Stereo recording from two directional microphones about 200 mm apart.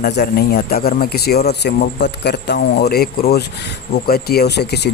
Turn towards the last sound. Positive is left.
turn(degrees=55)  # may be behind; listen again after turning